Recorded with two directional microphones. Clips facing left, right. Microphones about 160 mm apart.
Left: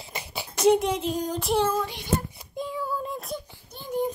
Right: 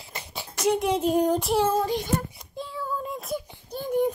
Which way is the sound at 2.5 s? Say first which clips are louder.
Left 3 dB; 15° left (ahead or behind).